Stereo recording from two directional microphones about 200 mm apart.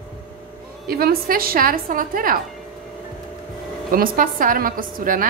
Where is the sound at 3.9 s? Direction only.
45° right (ahead or behind).